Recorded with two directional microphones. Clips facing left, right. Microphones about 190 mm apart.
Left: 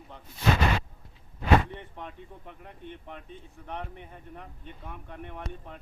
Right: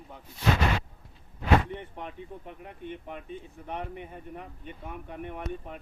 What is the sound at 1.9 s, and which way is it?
Speech, 10° right (ahead or behind).